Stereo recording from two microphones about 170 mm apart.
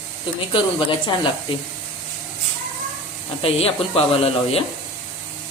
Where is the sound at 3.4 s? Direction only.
35° left (ahead or behind).